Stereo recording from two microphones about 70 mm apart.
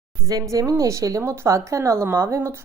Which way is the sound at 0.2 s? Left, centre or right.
Right.